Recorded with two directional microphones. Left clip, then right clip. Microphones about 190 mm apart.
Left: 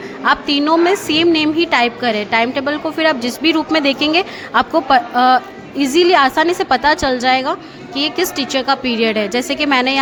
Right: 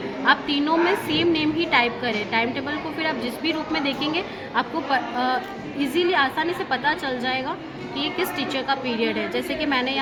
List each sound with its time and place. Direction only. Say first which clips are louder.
0.3 s a woman's voice: left 6 dB; 50° left (ahead or behind)